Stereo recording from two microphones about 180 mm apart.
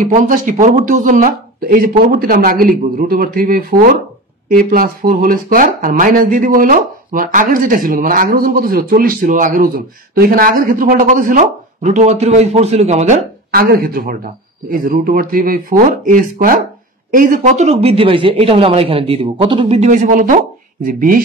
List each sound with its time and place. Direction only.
0.0 s speech: 45° right (ahead or behind)
13.5 s speech: 55° right (ahead or behind)